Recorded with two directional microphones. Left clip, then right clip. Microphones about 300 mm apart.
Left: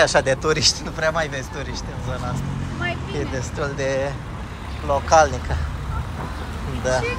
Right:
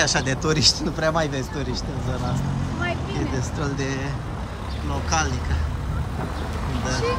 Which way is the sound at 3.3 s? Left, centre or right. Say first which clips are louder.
Left 2 dB; centre.